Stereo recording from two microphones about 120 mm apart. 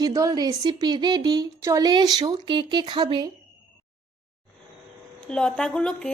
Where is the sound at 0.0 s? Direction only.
30° right (ahead or behind).